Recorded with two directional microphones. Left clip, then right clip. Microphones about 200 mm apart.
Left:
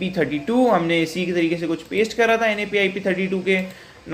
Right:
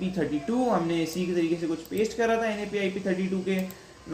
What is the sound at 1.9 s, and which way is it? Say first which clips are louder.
Speech: left 8 dB; 15° left (ahead or behind).